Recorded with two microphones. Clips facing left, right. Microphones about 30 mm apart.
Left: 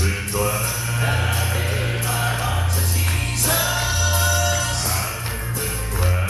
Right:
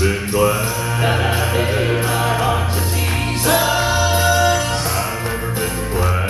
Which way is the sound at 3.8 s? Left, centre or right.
Right.